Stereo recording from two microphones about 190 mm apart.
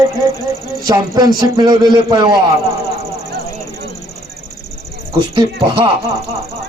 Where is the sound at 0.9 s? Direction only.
20° right (ahead or behind).